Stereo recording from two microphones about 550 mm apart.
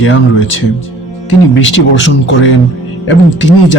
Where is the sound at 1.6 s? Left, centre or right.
Centre.